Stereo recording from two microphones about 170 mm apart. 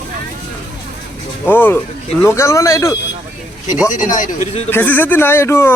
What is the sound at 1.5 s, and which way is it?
Speech, 10° left (ahead or behind).